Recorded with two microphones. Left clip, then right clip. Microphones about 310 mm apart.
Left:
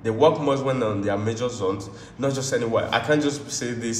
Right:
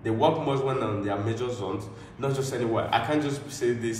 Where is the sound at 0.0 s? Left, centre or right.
Left.